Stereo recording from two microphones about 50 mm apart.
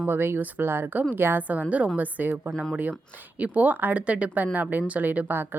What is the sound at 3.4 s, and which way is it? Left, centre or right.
Speech, right.